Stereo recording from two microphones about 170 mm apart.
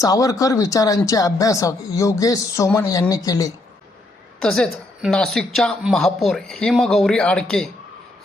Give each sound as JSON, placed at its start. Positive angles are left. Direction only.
{"t": 0.0, "sound": "speech", "side_deg": 20}
{"t": 4.4, "sound": "a woman's voice", "side_deg": 5}